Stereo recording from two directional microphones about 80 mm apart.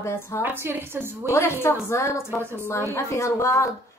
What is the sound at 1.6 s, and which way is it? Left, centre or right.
A woman's voice, left.